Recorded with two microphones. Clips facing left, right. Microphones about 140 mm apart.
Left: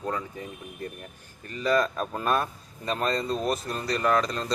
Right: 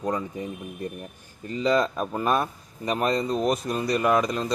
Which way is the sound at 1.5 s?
20° right (ahead or behind).